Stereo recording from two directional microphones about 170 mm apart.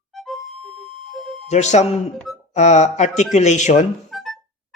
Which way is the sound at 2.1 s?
Centre (ahead or behind).